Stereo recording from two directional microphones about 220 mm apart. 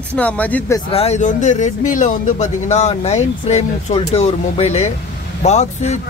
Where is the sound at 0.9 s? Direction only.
30° left (ahead or behind).